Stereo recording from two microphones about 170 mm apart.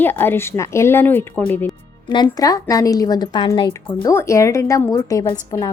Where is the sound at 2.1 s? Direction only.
25° left (ahead or behind).